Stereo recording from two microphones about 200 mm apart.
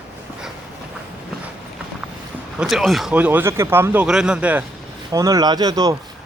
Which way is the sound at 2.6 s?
Centre (ahead or behind).